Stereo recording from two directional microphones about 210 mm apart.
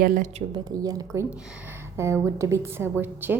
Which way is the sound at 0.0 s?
40° right (ahead or behind).